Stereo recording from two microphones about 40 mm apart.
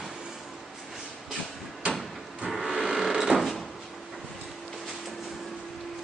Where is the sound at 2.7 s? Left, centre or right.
Centre.